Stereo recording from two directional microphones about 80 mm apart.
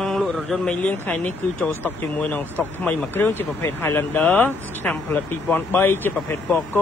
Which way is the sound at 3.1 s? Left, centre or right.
Left.